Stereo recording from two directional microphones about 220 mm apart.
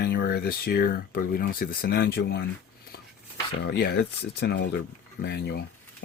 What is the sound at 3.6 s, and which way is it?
Speech, 45° left (ahead or behind).